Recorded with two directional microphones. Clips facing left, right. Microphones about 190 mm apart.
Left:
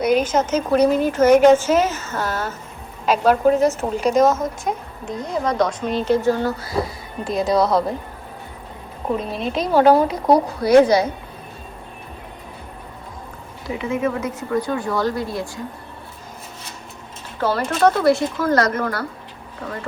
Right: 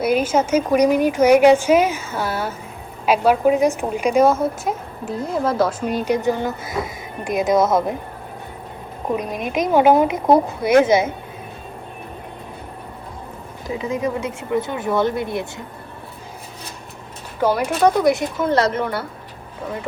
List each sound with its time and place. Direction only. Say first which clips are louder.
0.0 s speech: even; 5° right (ahead or behind)
9.1 s speech: right 1 dB; 15° right (ahead or behind)
14.2 s speech: even; 25° right (ahead or behind)
17.4 s speech: right 1 dB; 15° right (ahead or behind)